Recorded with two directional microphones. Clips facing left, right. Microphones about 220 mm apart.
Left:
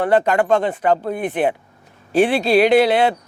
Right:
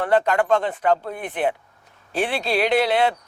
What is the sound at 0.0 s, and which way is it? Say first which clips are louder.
A man's voice: left 3 dB; 10° left (ahead or behind).